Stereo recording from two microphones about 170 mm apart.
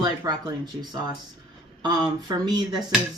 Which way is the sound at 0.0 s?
25° right (ahead or behind).